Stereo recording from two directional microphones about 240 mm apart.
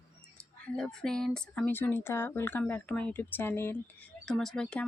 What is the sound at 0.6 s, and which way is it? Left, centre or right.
Speech, centre.